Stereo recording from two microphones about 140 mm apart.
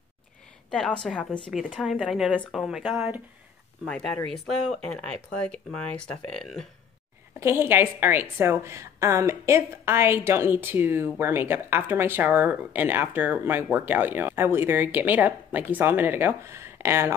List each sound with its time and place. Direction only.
0.7 s speech: 5° left (ahead or behind)
4.3 s speech: 5° left (ahead or behind)
7.3 s a woman's voice: 15° right (ahead or behind)